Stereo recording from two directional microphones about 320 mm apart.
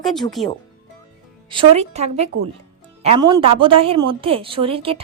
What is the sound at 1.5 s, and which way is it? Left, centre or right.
A woman's voice, centre.